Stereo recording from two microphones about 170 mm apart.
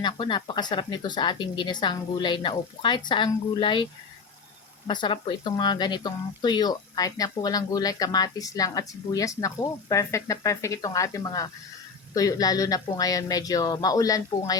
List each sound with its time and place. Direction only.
0.0 s speech: 25° left (ahead or behind)
4.9 s speech: 25° left (ahead or behind)